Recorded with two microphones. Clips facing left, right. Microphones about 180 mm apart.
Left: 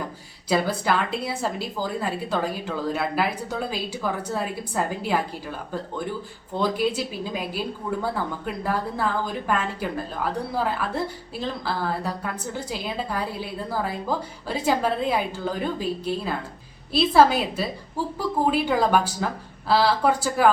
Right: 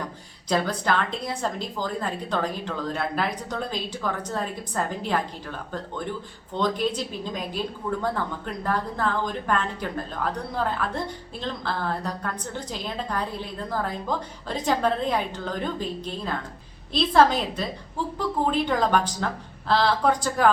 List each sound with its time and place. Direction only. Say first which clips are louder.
0.4 s a woman's voice: left 2 dB; 5° left (ahead or behind)